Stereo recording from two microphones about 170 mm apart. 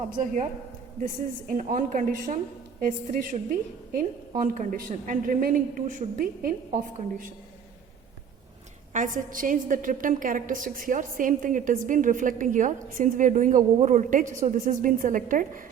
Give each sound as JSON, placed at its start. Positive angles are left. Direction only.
{"t": 0.1, "sound": "a woman's voice", "side_deg": -50}
{"t": 8.9, "sound": "a woman's voice", "side_deg": -50}